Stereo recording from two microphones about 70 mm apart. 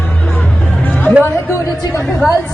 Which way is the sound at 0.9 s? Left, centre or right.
Left.